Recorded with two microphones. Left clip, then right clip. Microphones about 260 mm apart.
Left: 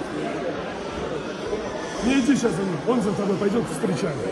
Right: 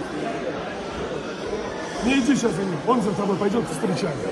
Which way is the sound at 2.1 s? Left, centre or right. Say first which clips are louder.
Even; right.